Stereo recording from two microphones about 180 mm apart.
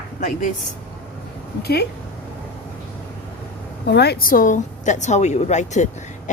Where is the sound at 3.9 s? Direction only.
65° left (ahead or behind).